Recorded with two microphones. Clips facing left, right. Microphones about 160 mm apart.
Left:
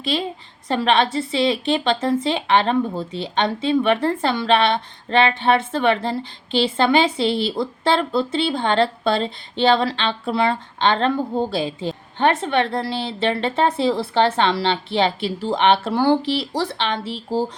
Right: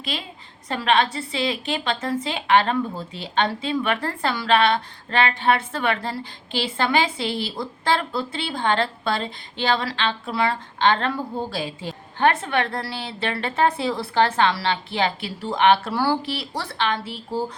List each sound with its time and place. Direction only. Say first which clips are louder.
0.7 s speech: left 3 dB; 25° left (ahead or behind)